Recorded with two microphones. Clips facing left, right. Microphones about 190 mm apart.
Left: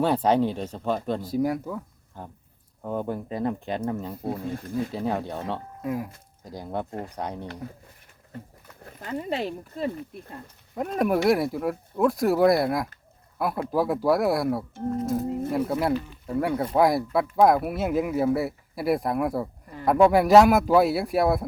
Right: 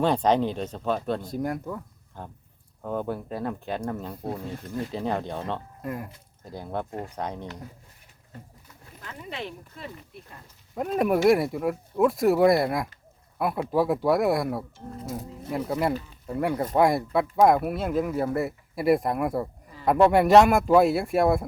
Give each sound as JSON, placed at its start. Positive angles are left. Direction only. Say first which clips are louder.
{"t": 0.0, "sound": "speech", "louder": "left 1 dB", "side_deg": 5}
{"t": 3.2, "sound": "speech", "louder": "left 3 dB", "side_deg": 0}
{"t": 6.4, "sound": "speech", "louder": "left 1 dB", "side_deg": 15}
{"t": 8.6, "sound": "a sound", "louder": "left 5 dB", "side_deg": 55}
{"t": 9.0, "sound": "speech", "louder": "left 8 dB", "side_deg": 40}
{"t": 10.8, "sound": "speech", "louder": "even", "side_deg": 0}